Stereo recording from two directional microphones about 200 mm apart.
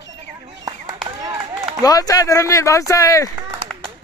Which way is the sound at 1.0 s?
20° right (ahead or behind).